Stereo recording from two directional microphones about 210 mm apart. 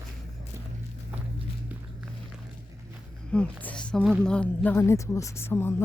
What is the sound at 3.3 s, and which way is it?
A woman's voice, 5° left (ahead or behind).